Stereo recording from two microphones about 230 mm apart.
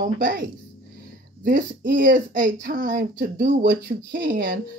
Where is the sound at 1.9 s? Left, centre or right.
Right.